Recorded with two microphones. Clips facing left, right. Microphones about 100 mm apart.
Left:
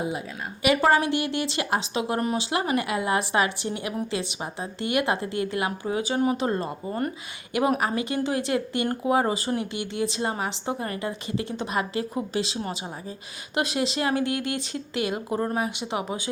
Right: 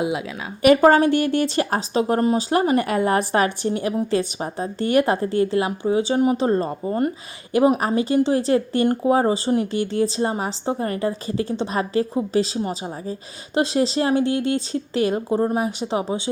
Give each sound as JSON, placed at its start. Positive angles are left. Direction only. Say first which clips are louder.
{"t": 0.0, "sound": "a woman's voice", "louder": "right 6 dB", "side_deg": -90}
{"t": 0.9, "sound": "speech", "louder": "right 6 dB", "side_deg": -40}